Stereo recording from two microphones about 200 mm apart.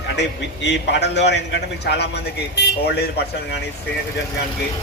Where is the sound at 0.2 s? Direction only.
60° left (ahead or behind).